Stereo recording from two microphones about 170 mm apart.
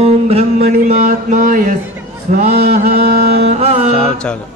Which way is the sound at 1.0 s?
50° right (ahead or behind).